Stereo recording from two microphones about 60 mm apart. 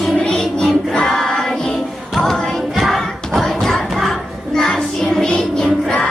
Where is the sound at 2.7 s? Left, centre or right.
Centre.